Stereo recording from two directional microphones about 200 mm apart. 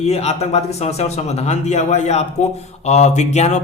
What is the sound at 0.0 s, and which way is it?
Speech, 30° left (ahead or behind).